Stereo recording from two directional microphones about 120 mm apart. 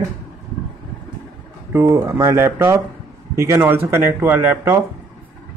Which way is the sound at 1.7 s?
20° right (ahead or behind).